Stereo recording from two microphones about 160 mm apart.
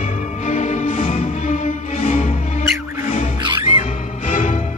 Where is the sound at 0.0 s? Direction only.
40° left (ahead or behind).